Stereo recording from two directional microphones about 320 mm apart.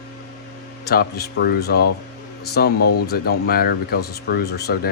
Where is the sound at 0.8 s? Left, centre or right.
Left.